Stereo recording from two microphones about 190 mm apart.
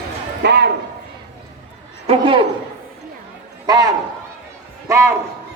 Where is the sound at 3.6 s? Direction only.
20° right (ahead or behind).